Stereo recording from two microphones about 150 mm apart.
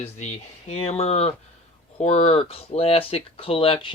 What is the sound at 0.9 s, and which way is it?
Speech, 45° left (ahead or behind).